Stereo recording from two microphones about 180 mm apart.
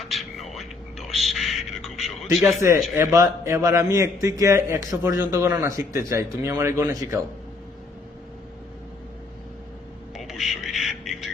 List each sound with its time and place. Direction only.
0.0 s a sound: centre (ahead or behind)
2.6 s a man's voice: 15° right (ahead or behind)
10.2 s music: centre (ahead or behind)